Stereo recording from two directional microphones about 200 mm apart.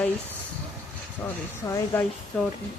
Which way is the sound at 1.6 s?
15° left (ahead or behind).